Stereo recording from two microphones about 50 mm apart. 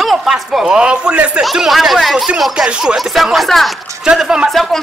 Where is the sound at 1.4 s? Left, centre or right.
Centre.